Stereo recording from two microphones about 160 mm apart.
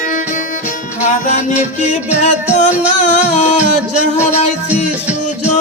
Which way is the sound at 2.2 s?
45° left (ahead or behind).